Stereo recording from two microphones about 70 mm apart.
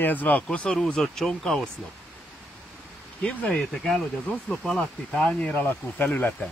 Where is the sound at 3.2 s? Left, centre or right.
Centre.